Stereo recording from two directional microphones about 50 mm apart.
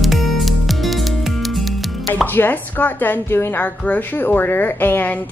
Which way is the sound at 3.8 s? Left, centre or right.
Left.